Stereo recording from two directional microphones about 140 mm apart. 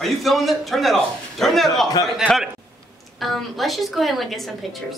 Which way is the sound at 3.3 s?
Centre (ahead or behind).